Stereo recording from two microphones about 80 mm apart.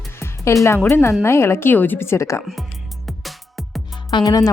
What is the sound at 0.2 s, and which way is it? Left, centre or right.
Music, left.